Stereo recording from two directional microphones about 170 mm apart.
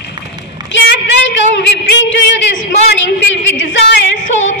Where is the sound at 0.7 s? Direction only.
90° left.